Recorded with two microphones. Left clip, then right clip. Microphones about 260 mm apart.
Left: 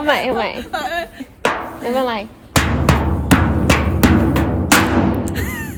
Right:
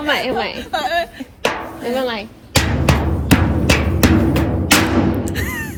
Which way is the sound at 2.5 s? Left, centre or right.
Centre.